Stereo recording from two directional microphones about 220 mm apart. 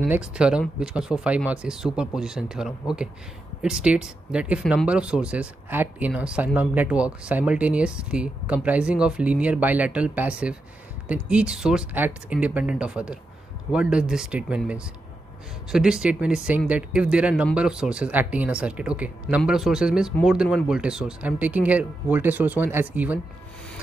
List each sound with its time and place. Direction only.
0.0 s speech: 5° right (ahead or behind)